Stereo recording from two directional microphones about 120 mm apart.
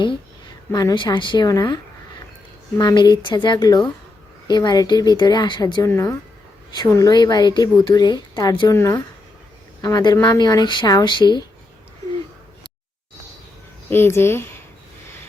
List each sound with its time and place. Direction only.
0.7 s a woman's voice: 30° left (ahead or behind)
5.9 s a woman's voice: 20° left (ahead or behind)
8.7 s speech: 25° left (ahead or behind)
9.8 s a woman's voice: 35° left (ahead or behind)
13.9 s speech: 20° left (ahead or behind)